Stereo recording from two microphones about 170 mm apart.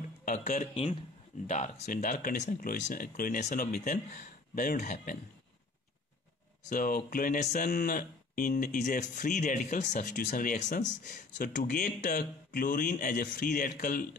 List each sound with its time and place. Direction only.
0.2 s a man's voice: 50° left (ahead or behind)
6.7 s speech: 55° left (ahead or behind)